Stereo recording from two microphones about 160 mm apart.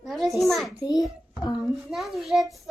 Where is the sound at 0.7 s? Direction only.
25° left (ahead or behind).